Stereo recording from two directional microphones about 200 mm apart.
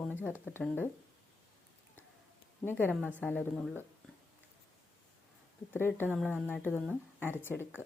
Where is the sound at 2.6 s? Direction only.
10° left (ahead or behind).